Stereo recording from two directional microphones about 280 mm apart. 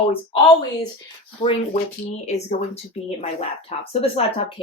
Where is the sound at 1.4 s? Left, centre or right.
Centre.